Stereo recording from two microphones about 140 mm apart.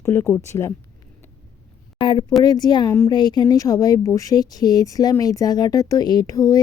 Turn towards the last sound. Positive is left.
turn(degrees=25)  # may be behind; listen again after turning